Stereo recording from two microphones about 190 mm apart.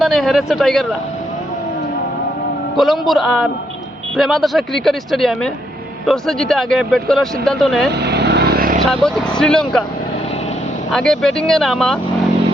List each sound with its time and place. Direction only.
0.0 s speech: centre (ahead or behind)
2.7 s speech: centre (ahead or behind)
7.9 s vehicle: 60° right (ahead or behind)
8.9 s speech: 5° left (ahead or behind)
10.9 s speech: centre (ahead or behind)